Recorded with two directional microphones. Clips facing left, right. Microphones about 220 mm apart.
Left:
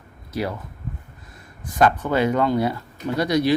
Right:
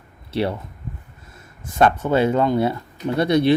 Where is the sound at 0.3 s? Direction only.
30° right (ahead or behind).